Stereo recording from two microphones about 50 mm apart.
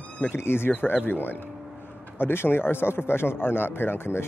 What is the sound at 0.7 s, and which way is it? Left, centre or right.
A man's voice, left.